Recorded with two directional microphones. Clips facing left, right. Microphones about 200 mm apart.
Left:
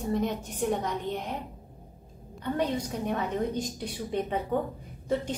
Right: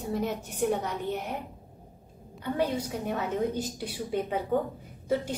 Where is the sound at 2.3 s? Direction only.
5° right (ahead or behind).